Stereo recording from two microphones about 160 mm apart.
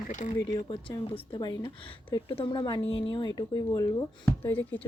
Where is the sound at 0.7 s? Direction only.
25° left (ahead or behind).